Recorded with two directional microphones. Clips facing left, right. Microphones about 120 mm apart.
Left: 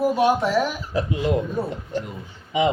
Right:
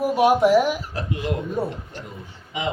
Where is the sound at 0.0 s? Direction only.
15° right (ahead or behind).